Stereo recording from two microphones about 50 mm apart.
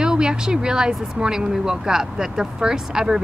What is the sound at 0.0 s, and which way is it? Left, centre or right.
Speech, centre.